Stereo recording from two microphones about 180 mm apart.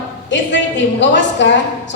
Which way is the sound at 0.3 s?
85° left.